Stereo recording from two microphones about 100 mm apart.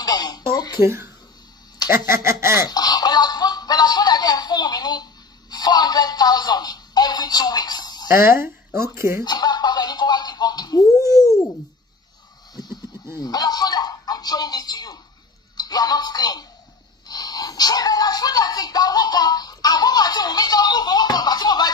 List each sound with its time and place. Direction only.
0.0 s a sound: 40° left (ahead or behind)
0.8 s speech: 25° right (ahead or behind)
2.5 s music: 40° left (ahead or behind)
8.1 s speech: 25° right (ahead or behind)
9.2 s a sound: 40° left (ahead or behind)
13.2 s speech: 40° left (ahead or behind)
17.1 s music: 40° left (ahead or behind)